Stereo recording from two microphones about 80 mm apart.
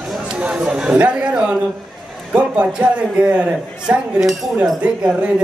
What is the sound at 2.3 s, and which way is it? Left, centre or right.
A man's voice, centre.